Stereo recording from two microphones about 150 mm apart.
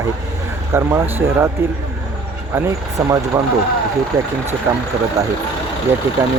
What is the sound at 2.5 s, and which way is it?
Speech, 20° right (ahead or behind).